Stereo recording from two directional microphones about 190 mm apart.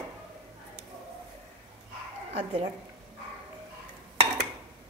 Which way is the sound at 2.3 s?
30° right (ahead or behind).